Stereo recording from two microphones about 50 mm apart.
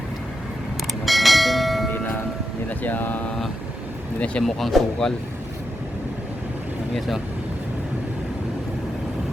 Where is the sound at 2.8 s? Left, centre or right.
Left.